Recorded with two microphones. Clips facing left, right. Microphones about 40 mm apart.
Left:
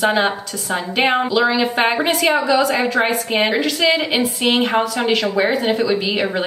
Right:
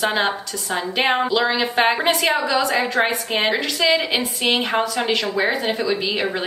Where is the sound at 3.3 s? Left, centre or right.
Centre.